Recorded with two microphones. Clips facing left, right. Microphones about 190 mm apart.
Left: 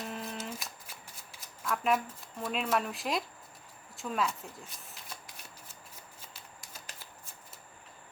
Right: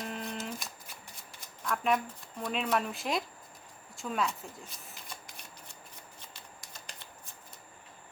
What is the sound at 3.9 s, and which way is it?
Shuffling cards, centre (ahead or behind).